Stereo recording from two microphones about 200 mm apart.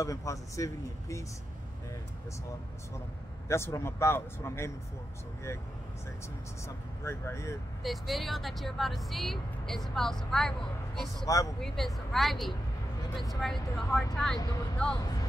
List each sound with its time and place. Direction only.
0.0 s speech: 15° left (ahead or behind)
3.4 s speech: 15° left (ahead or behind)
7.1 s speech: 15° left (ahead or behind)
7.8 s speech: centre (ahead or behind)
11.2 s speech: 15° left (ahead or behind)
11.6 s speech: centre (ahead or behind)
14.4 s speech: 20° left (ahead or behind)